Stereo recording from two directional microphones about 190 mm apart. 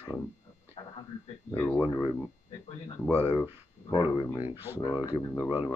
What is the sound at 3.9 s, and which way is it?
Speech, 25° left (ahead or behind).